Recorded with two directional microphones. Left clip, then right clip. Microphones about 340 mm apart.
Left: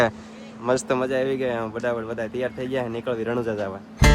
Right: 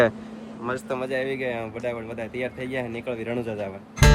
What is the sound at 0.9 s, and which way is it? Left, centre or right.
Speech, centre.